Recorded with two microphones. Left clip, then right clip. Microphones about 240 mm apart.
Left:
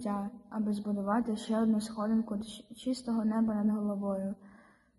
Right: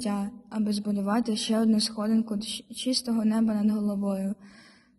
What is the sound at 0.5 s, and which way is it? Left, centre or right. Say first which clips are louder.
Speech: right 5 dB; right.